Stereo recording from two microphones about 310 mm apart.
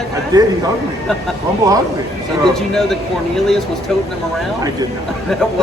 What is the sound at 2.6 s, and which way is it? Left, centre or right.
Speech, centre.